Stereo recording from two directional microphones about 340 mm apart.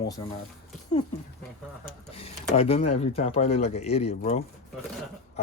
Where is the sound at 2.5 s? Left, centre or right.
Centre.